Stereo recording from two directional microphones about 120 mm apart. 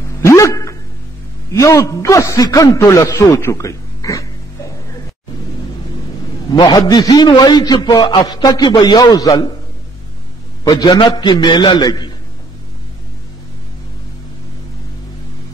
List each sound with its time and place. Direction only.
0.2 s a sound: 25° left (ahead or behind)
1.5 s a man's voice: 25° left (ahead or behind)
6.5 s a man's voice: 35° left (ahead or behind)
10.7 s a man's voice: 35° left (ahead or behind)